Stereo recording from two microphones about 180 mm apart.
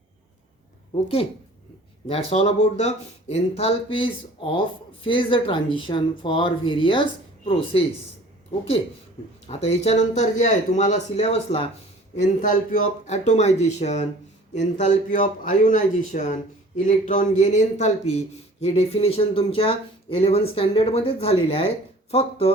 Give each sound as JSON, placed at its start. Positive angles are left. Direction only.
{"t": 1.0, "sound": "speech", "side_deg": 30}
{"t": 9.5, "sound": "speech", "side_deg": 35}